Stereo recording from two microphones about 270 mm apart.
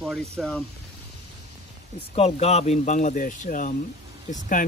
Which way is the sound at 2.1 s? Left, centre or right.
Left.